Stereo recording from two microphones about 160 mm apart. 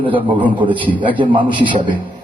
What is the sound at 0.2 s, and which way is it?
A man's voice, 30° right (ahead or behind).